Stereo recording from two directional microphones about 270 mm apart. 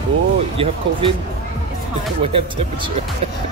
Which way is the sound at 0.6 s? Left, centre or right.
Right.